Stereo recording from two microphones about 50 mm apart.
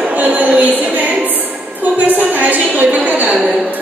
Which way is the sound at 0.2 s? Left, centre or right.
Right.